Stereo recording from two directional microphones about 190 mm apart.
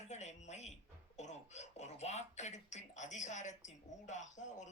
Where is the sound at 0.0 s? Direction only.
35° left (ahead or behind).